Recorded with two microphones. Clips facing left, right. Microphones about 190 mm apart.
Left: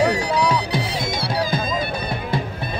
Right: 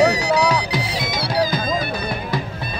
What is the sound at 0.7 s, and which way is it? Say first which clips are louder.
Music: even; 25° left (ahead or behind).